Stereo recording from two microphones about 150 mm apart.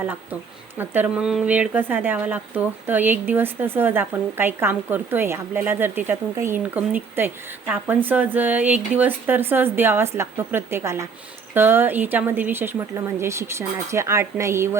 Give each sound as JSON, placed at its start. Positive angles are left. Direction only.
{"t": 0.0, "sound": "speech", "side_deg": -10}